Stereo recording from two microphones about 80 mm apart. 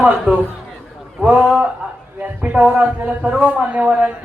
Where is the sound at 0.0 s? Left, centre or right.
Centre.